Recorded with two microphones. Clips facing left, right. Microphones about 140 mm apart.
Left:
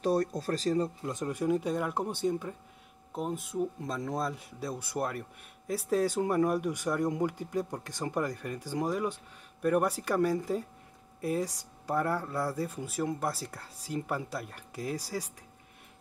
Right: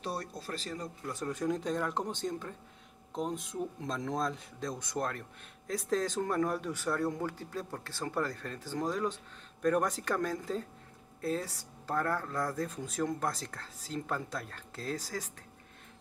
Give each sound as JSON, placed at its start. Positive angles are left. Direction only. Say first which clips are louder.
{"t": 0.0, "sound": "speech", "louder": "left 10 dB", "side_deg": 45}
{"t": 1.0, "sound": "speech", "louder": "left 3 dB", "side_deg": 15}